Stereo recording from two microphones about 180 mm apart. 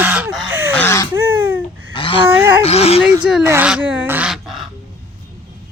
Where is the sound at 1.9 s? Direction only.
30° left (ahead or behind).